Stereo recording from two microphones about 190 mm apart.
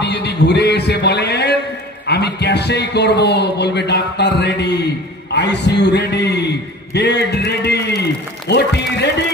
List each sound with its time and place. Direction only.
0.0 s music: 60° left (ahead or behind)
2.0 s a man's voice: 60° left (ahead or behind)